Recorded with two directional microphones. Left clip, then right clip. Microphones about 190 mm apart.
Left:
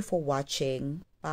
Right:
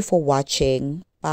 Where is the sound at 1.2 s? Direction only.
40° right (ahead or behind).